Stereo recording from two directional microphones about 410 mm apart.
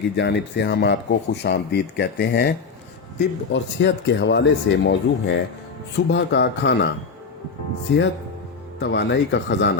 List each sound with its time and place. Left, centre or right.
0.2 s speech: left